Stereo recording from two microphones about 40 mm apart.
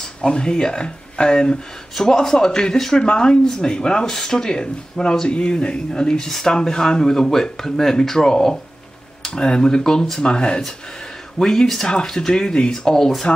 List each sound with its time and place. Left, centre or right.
0.0 s speech: left